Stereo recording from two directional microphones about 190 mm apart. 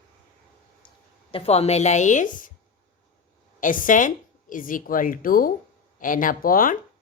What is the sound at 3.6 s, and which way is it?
A woman's voice, 45° left (ahead or behind).